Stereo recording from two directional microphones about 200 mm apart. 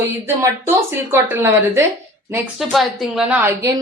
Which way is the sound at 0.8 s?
10° right (ahead or behind).